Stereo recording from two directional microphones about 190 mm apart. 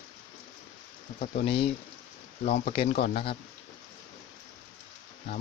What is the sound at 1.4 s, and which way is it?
Speech, 30° left (ahead or behind).